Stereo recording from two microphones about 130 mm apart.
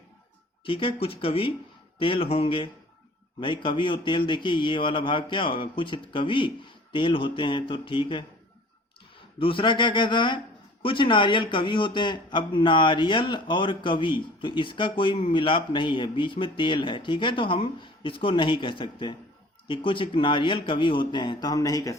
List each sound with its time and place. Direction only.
0.6 s speech: 40° left (ahead or behind)
9.4 s speech: 40° left (ahead or behind)